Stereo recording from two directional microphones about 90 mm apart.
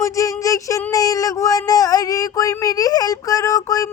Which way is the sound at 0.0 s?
40° left (ahead or behind).